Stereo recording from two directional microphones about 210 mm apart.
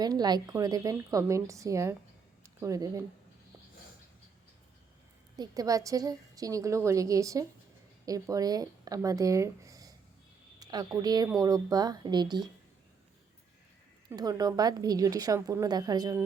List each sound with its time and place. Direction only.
0.0 s a woman's voice: 20° right (ahead or behind)
2.4 s a sound: 15° right (ahead or behind)
5.4 s a woman's voice: 15° right (ahead or behind)
14.1 s a woman's voice: 15° right (ahead or behind)